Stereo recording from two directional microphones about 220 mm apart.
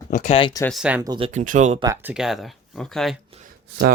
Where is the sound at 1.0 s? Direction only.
20° right (ahead or behind).